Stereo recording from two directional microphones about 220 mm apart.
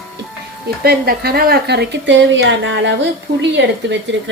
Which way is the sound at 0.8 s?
45° right (ahead or behind).